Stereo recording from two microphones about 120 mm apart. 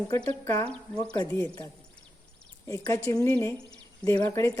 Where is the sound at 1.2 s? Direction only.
20° left (ahead or behind).